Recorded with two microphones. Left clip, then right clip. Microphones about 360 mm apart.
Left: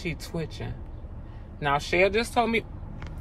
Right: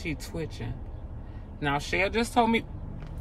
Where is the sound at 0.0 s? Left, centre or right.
Centre.